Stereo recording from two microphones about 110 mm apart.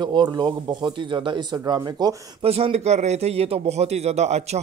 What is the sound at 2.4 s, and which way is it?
A man's voice, 65° right (ahead or behind).